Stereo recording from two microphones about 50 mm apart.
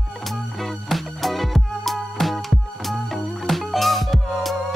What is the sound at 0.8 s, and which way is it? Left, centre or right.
Music, centre.